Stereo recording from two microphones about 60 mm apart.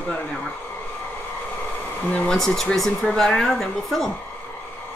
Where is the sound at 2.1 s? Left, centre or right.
Centre.